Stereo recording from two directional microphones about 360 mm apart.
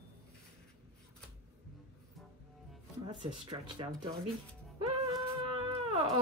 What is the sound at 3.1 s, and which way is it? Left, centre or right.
Speech, centre.